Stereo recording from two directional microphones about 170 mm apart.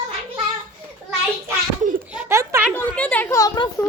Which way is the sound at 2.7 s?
5° left (ahead or behind).